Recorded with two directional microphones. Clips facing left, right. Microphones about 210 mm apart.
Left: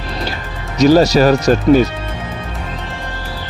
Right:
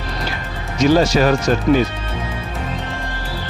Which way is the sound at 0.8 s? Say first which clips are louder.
Left 4 dB; 40° left (ahead or behind).